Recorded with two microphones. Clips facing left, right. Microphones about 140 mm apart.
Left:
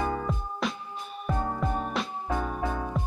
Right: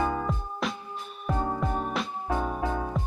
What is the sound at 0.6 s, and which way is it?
Music, centre (ahead or behind).